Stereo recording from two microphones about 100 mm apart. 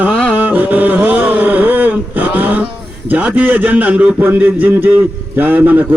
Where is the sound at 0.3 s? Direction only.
15° right (ahead or behind).